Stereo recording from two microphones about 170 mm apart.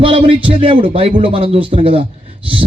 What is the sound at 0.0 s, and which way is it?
A man's voice, 35° right (ahead or behind).